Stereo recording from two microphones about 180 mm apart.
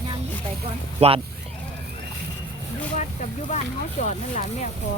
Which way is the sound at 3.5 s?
40° left (ahead or behind).